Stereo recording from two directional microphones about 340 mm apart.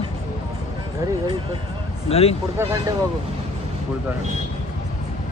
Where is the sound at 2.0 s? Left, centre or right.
Centre.